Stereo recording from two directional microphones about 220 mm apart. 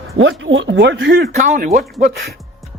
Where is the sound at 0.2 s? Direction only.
60° right (ahead or behind).